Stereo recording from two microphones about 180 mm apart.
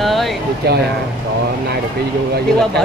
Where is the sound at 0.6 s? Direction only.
65° right (ahead or behind).